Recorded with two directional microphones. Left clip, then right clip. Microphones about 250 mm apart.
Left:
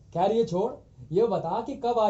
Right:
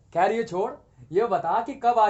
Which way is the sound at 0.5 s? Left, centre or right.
Right.